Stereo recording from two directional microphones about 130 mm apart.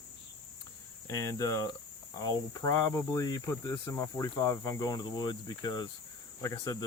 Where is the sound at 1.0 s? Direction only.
25° left (ahead or behind).